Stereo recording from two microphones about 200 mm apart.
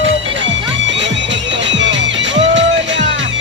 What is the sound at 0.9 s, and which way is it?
Music, 65° right (ahead or behind).